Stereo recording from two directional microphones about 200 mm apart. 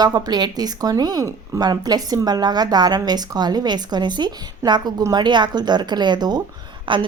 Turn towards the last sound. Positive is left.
turn(degrees=-25)  # may be behind; listen again after turning